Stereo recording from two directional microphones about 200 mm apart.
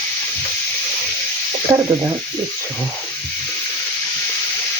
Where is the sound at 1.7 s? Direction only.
15° right (ahead or behind).